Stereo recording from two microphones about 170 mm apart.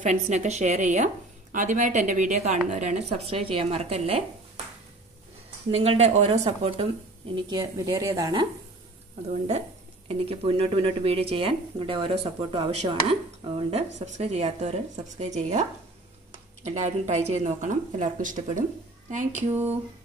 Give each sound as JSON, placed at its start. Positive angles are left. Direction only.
{"t": 0.0, "sound": "speech", "side_deg": -45}
{"t": 5.7, "sound": "speech", "side_deg": -40}
{"t": 7.4, "sound": "a woman's voice", "side_deg": -25}
{"t": 10.0, "sound": "speech", "side_deg": -35}
{"t": 16.6, "sound": "speech", "side_deg": -40}